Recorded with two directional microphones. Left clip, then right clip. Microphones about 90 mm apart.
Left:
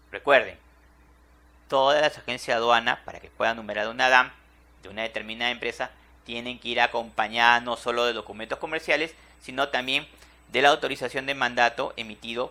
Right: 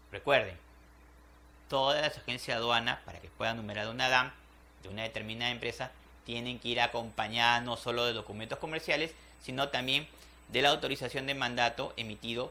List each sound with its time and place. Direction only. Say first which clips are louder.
0.1 s speech: left 8 dB; 35° left (ahead or behind)
1.6 s speech: left 9 dB; 35° left (ahead or behind)